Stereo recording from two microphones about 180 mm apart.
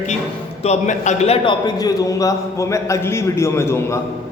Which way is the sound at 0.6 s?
40° left (ahead or behind).